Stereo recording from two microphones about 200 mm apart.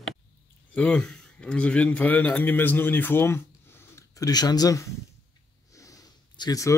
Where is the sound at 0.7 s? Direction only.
5° left (ahead or behind).